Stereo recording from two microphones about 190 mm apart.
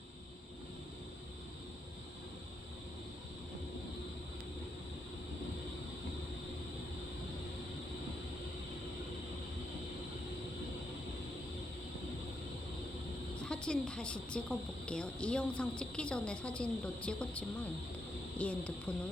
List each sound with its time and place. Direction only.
13.4 s a woman's voice: 5° left (ahead or behind)